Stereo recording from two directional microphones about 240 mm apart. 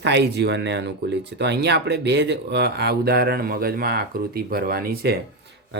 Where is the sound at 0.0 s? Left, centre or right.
Right.